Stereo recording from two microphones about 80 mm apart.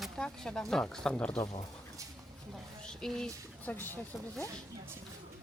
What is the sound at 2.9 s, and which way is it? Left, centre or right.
Speech, centre.